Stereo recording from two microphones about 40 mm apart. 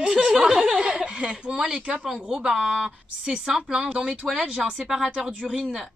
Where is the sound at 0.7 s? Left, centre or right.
Right.